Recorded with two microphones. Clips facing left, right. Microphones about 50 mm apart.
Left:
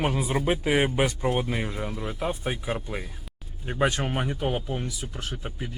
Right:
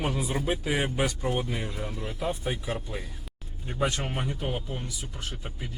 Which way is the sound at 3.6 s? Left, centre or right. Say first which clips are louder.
Left 4 dB; left.